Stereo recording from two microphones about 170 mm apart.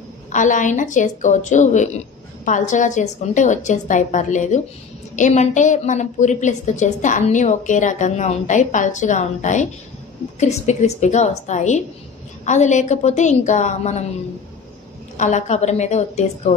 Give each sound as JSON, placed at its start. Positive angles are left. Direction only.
{"t": 0.3, "sound": "a woman's voice", "side_deg": 50}
{"t": 15.1, "sound": "a woman's voice", "side_deg": 45}